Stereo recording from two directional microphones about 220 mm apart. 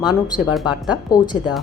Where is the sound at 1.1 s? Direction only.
15° left (ahead or behind).